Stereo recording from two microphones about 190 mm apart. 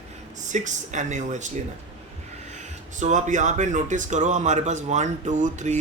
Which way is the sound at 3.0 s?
40° right (ahead or behind).